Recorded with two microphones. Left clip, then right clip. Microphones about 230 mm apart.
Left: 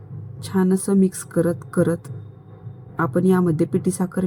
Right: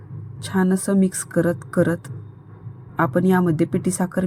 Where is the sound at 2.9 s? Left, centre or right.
Centre.